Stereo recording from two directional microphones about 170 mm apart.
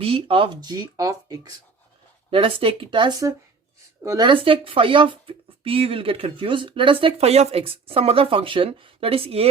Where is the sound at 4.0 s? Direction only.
15° right (ahead or behind).